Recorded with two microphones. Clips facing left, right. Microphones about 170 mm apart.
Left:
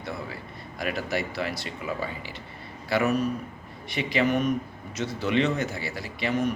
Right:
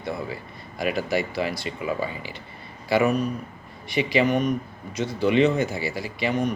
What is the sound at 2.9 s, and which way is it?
Speech, centre (ahead or behind).